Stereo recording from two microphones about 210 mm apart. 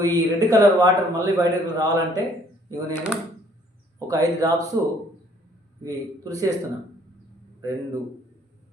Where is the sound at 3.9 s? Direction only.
15° right (ahead or behind).